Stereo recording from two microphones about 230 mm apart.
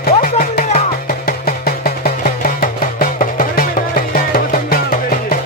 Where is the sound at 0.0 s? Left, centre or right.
Left.